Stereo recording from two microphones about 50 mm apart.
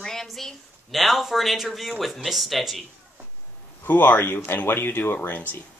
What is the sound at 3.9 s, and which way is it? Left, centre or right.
Speech, left.